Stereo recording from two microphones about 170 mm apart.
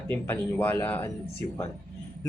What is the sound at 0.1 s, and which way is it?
Speech, 10° left (ahead or behind).